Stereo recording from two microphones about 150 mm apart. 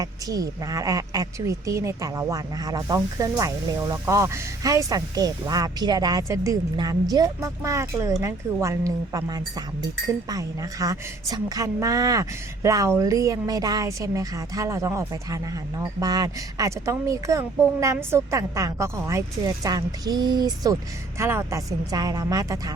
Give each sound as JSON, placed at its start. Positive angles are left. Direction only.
{"t": 0.0, "sound": "speech", "side_deg": -25}